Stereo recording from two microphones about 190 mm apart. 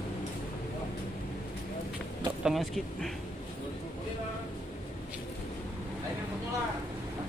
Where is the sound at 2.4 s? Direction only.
Centre (ahead or behind).